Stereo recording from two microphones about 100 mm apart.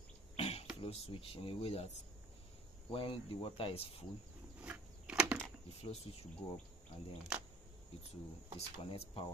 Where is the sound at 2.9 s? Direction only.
65° left (ahead or behind).